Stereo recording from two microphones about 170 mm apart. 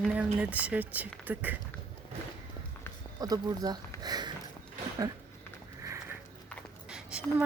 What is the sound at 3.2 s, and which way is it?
Speech, 20° right (ahead or behind).